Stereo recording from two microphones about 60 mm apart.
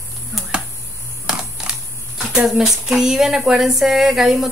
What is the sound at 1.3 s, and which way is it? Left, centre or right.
Typing, centre.